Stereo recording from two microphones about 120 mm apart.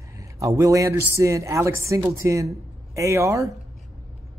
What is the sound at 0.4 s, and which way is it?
Speech, 25° right (ahead or behind).